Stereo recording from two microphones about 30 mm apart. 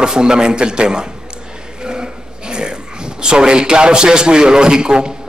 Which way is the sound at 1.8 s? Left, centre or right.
Right.